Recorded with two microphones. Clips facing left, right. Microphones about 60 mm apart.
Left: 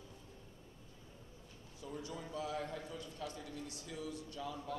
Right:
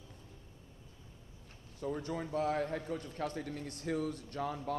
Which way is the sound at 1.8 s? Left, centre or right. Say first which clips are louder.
Right 8 dB; right.